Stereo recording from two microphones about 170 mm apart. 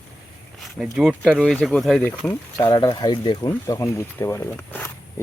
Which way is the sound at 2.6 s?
25° left (ahead or behind).